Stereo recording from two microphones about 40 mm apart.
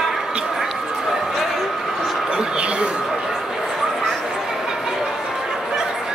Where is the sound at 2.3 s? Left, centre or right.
Right.